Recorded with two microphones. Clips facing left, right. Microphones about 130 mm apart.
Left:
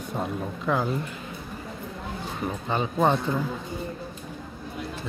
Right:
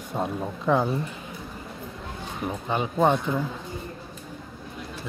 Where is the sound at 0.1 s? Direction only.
20° right (ahead or behind).